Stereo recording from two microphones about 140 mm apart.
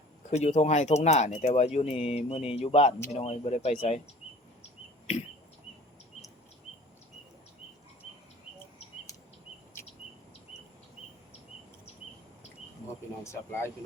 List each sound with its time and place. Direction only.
0.3 s speech: 55° left (ahead or behind)
13.2 s speech: 20° left (ahead or behind)